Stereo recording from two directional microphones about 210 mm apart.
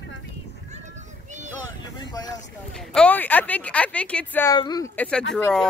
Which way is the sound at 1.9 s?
20° left (ahead or behind).